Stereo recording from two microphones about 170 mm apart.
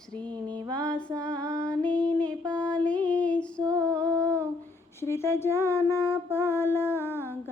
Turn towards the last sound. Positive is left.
turn(degrees=15)  # may be behind; listen again after turning